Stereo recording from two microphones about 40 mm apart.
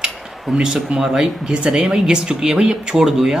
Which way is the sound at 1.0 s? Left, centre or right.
Centre.